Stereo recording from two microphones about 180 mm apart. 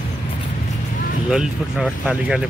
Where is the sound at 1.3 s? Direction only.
5° right (ahead or behind).